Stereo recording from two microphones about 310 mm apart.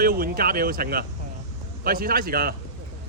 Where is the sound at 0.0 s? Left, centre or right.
Right.